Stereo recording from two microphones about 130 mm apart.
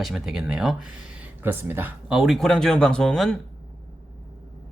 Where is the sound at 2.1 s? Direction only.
Centre (ahead or behind).